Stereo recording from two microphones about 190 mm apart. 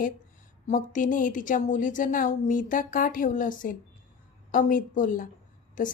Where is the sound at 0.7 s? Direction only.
45° left (ahead or behind).